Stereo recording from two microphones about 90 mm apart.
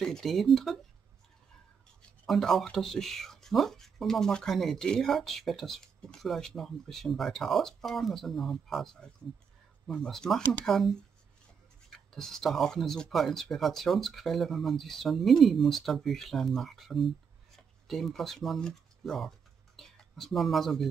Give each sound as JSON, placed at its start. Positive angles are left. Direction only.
{"t": 0.0, "sound": "speech", "side_deg": 5}
{"t": 2.2, "sound": "speech", "side_deg": 5}